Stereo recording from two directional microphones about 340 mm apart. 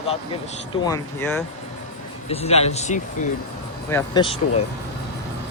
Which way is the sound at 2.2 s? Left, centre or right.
Centre.